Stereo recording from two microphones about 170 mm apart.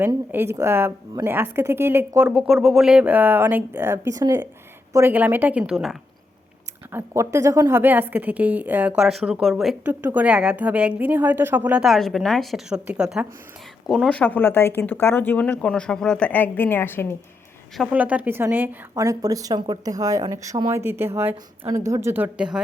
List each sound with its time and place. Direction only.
0.0 s a woman's voice: 10° right (ahead or behind)
6.9 s a woman's voice: 15° right (ahead or behind)
14.2 s speech: 10° left (ahead or behind)
17.7 s a woman's voice: 10° right (ahead or behind)